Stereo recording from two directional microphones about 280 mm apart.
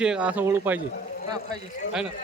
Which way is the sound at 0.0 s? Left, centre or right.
Centre.